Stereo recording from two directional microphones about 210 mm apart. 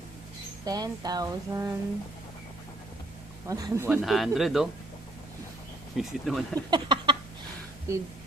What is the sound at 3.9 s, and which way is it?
Speech, centre (ahead or behind).